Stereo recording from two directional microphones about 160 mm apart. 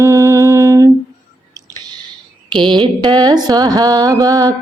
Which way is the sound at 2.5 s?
30° right (ahead or behind).